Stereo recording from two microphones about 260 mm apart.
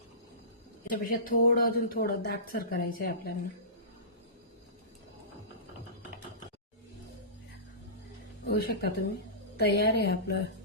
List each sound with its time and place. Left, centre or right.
0.9 s speech: left
8.4 s speech: left